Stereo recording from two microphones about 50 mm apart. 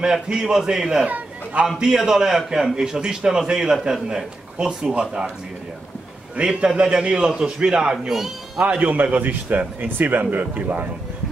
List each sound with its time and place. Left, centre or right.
0.0 s a man's voice: centre
1.0 s a sound: right
2.0 s a man's voice: centre
6.3 s a man's voice: centre
8.1 s speech: centre
8.6 s a man's voice: right